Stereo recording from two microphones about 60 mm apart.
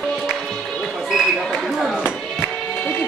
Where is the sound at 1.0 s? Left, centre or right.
Centre.